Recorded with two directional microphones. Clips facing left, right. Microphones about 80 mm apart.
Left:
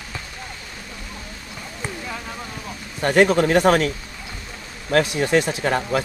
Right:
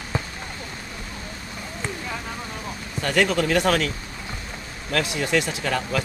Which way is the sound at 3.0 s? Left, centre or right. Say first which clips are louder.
Left 5 dB; left.